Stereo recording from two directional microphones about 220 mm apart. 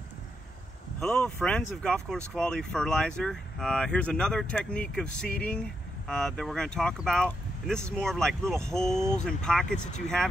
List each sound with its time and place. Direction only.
0.9 s speech: 5° left (ahead or behind)
9.8 s speech: 35° left (ahead or behind)